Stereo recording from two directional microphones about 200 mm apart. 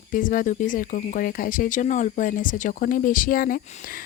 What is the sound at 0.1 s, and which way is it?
Speech, 40° left (ahead or behind).